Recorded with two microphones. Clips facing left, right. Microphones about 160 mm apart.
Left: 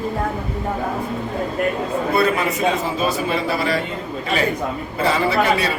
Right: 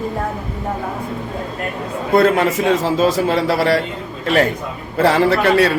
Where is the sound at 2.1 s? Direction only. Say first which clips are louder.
Right 7 dB; 90° right.